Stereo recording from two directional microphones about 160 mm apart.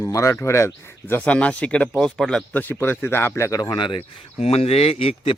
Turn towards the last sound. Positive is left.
turn(degrees=35)  # may be behind; listen again after turning